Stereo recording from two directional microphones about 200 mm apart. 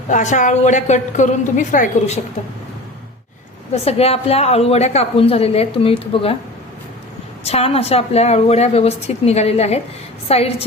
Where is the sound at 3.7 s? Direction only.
30° left (ahead or behind).